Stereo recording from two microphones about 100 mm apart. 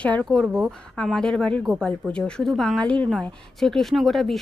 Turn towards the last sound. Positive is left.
turn(degrees=0)  # may be behind; listen again after turning